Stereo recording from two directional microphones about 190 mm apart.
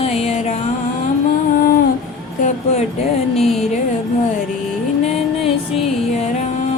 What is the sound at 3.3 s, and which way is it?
Music, centre (ahead or behind).